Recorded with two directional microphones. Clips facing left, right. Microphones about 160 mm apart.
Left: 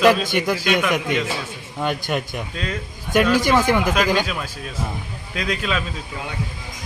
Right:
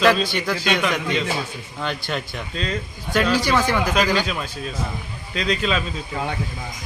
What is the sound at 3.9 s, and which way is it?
Speech, 15° left (ahead or behind).